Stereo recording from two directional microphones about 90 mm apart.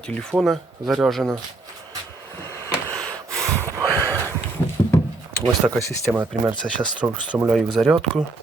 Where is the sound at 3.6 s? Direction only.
30° right (ahead or behind).